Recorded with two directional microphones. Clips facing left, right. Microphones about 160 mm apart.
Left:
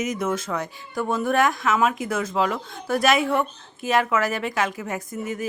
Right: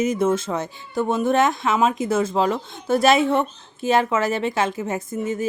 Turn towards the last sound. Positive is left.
turn(degrees=-25)  # may be behind; listen again after turning